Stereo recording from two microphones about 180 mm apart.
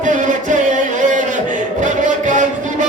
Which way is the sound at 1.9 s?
45° right (ahead or behind).